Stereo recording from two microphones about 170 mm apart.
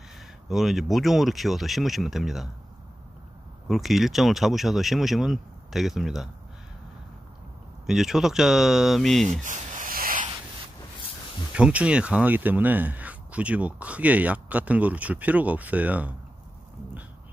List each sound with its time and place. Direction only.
0.5 s speech: centre (ahead or behind)
3.6 s speech: centre (ahead or behind)
7.8 s speech: centre (ahead or behind)
9.4 s a sound: 45° right (ahead or behind)
11.5 s speech: 5° right (ahead or behind)